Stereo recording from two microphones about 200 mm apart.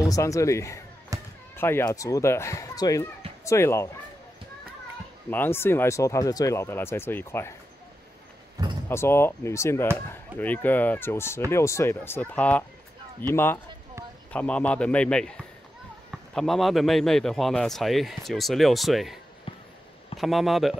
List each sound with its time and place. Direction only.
0.1 s speech: 15° left (ahead or behind)
1.1 s music: 15° right (ahead or behind)
1.6 s speech: 10° left (ahead or behind)
5.3 s speech: 10° left (ahead or behind)
8.8 s a man's voice: 10° left (ahead or behind)
20.2 s a man's voice: centre (ahead or behind)